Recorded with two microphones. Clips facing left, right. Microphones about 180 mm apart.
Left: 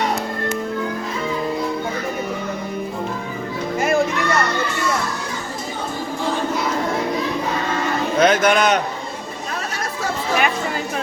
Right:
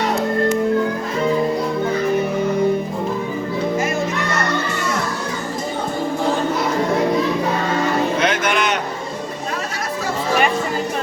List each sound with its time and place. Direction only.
8.2 s music: 40° left (ahead or behind)